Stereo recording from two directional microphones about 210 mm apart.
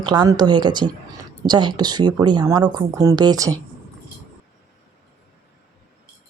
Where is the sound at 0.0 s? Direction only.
20° right (ahead or behind).